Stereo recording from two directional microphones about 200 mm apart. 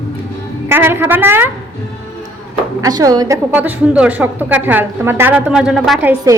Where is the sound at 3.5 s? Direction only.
5° right (ahead or behind).